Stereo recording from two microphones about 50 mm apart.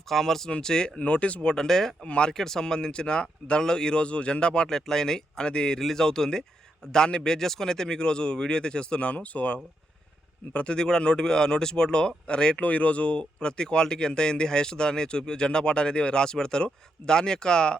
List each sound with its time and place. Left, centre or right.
0.1 s speech: centre
0.9 s speech: left
1.5 s speech: centre
2.0 s speech: centre